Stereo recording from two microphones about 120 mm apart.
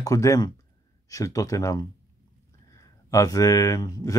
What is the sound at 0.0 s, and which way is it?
Speech, 25° left (ahead or behind).